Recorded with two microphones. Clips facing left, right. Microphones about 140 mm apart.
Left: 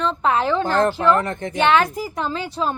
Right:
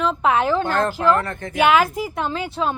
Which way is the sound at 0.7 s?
20° left (ahead or behind).